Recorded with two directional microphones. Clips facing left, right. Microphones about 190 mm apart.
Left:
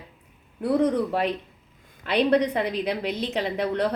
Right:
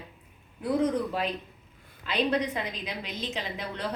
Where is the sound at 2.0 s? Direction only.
65° left (ahead or behind).